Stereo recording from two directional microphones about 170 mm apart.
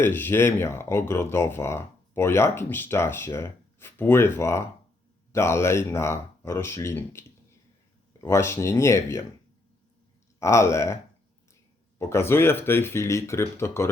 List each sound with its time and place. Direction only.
0.0 s speech: 10° left (ahead or behind)
10.4 s speech: 15° left (ahead or behind)
11.9 s speech: 15° left (ahead or behind)